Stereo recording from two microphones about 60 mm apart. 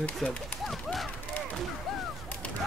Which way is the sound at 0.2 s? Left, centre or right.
Centre.